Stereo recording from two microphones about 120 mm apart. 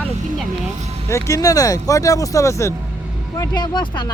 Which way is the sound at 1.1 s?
25° left (ahead or behind).